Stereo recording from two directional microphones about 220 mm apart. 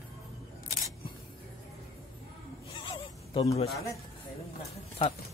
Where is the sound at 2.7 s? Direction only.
20° left (ahead or behind).